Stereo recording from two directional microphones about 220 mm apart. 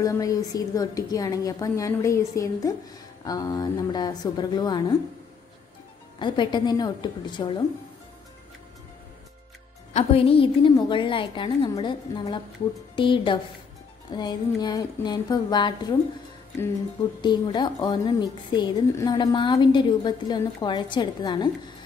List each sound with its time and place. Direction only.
0.0 s a woman's voice: 15° left (ahead or behind)
6.1 s a woman's voice: 20° left (ahead or behind)
9.9 s a woman's voice: 25° left (ahead or behind)
17.2 s a woman's voice: 20° left (ahead or behind)